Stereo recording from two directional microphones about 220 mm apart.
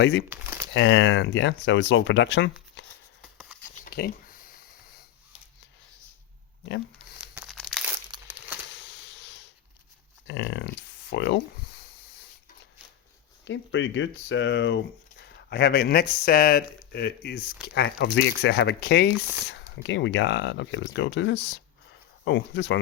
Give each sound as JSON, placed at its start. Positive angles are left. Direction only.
{"t": 0.0, "sound": "speech", "side_deg": 55}
{"t": 0.3, "sound": "crumpling", "side_deg": -10}
{"t": 0.7, "sound": "speech", "side_deg": 55}
{"t": 3.8, "sound": "a sound", "side_deg": 40}
{"t": 7.2, "sound": "crumpling", "side_deg": -5}
{"t": 8.1, "sound": "crumpling", "side_deg": -20}
{"t": 10.2, "sound": "speech", "side_deg": 55}
{"t": 13.4, "sound": "speech", "side_deg": 55}